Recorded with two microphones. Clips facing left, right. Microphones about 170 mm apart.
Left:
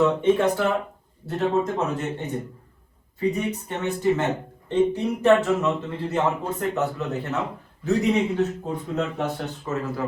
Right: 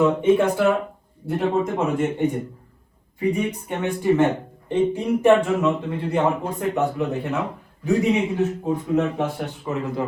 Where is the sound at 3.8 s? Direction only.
10° right (ahead or behind).